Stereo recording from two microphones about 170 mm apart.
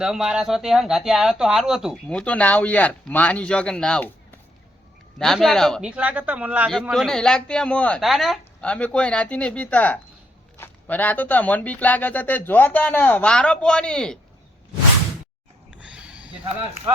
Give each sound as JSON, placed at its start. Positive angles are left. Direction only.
{"t": 0.0, "sound": "speech", "side_deg": -5}
{"t": 5.2, "sound": "speech", "side_deg": 0}
{"t": 15.8, "sound": "a sound", "side_deg": -5}
{"t": 16.4, "sound": "speech", "side_deg": -35}